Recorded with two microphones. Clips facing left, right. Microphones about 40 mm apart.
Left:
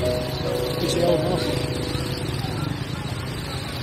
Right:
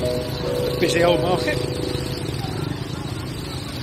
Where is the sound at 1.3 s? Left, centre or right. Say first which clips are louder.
Right 2 dB; centre.